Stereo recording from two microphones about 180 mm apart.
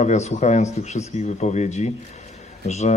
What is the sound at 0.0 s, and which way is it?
A man's voice, 40° left (ahead or behind).